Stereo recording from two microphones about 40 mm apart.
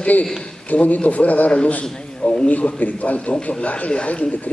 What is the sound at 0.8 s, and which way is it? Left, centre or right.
A man's voice, left.